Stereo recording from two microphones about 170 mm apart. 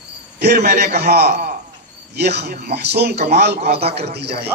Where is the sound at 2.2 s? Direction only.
75° right (ahead or behind).